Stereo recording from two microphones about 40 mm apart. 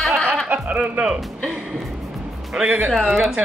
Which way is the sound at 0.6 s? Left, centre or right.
Right.